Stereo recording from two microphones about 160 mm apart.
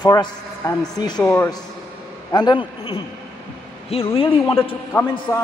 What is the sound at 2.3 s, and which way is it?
A man's voice, 25° left (ahead or behind).